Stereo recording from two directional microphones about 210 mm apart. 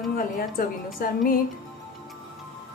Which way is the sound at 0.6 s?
40° left (ahead or behind).